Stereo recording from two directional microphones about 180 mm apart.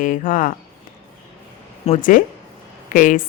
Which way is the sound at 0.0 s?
50° left (ahead or behind).